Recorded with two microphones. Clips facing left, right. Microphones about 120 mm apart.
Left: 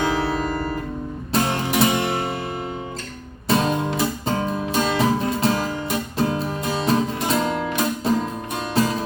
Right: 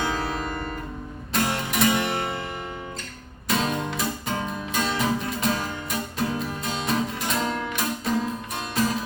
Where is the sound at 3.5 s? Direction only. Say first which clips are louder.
Left 5 dB; 30° left (ahead or behind).